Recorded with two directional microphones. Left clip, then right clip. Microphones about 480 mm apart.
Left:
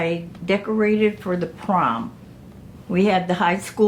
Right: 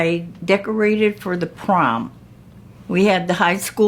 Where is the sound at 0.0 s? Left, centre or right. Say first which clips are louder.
Right 4 dB; right.